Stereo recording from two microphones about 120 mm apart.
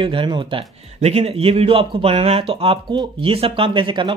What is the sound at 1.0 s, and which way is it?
Speech, 60° right (ahead or behind).